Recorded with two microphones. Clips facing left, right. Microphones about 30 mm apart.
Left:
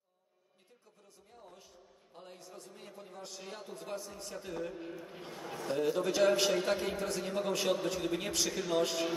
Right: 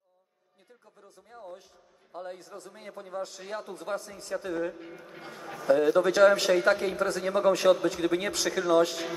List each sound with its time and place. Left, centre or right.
2.2 s a man's voice: right